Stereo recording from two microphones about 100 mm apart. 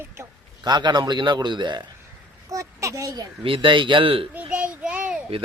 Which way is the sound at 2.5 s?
30° right (ahead or behind).